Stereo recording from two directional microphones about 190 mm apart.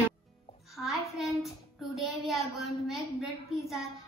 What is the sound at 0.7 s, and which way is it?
Child singing, centre (ahead or behind).